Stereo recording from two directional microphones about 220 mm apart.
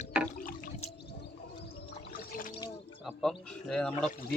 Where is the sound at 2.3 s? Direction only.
40° left (ahead or behind).